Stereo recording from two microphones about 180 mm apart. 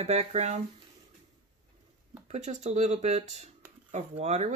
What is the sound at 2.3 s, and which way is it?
Speech, 40° right (ahead or behind).